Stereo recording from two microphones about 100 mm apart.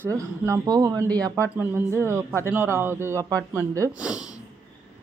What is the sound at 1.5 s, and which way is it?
A man's voice, 25° right (ahead or behind).